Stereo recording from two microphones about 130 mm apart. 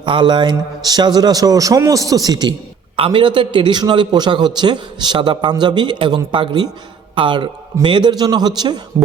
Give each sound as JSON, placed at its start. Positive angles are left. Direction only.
{"t": 0.0, "sound": "a man's voice", "side_deg": -35}
{"t": 2.9, "sound": "a man's voice", "side_deg": -40}